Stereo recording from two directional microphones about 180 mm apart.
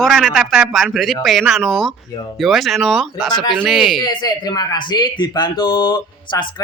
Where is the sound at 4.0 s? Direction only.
25° left (ahead or behind).